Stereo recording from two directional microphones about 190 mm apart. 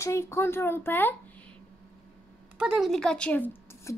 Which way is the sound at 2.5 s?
5° right (ahead or behind).